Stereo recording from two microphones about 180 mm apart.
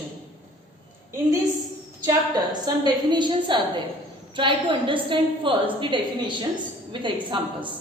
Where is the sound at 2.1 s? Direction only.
20° right (ahead or behind).